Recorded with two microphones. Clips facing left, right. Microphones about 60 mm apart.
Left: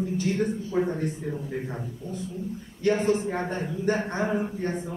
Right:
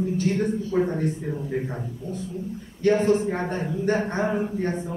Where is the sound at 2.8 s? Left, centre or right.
Right.